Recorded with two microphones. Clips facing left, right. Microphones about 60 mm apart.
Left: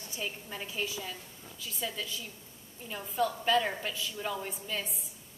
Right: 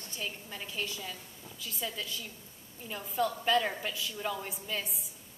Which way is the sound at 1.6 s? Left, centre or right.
Centre.